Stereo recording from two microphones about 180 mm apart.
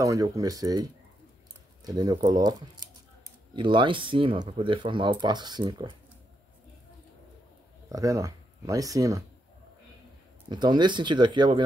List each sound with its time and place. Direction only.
0.0 s speech: 20° right (ahead or behind)
7.9 s speech: 20° right (ahead or behind)
10.5 s speech: 25° right (ahead or behind)